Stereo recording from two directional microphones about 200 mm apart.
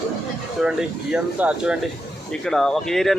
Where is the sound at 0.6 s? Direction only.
5° right (ahead or behind).